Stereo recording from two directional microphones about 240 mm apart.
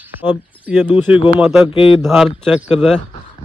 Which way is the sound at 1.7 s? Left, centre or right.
Left.